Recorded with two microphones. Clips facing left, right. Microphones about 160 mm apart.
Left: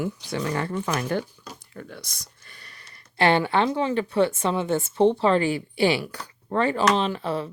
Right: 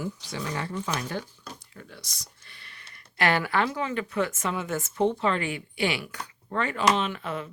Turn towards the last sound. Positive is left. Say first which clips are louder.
# left 5 dB
turn(degrees=35)  # may be behind; listen again after turning